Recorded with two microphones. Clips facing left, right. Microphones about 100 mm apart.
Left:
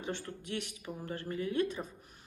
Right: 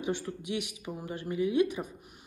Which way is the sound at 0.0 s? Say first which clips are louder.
Right 6 dB; 15° right (ahead or behind).